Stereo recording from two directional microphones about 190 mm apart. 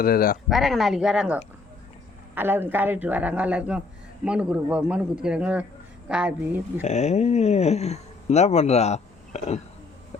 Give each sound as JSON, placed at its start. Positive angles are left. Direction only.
{"t": 0.0, "sound": "speech", "side_deg": 50}
{"t": 0.5, "sound": "a man's voice", "side_deg": 0}
{"t": 6.8, "sound": "speech", "side_deg": 35}